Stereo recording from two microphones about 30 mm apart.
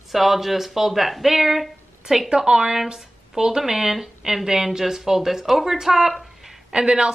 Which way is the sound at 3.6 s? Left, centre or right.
Centre.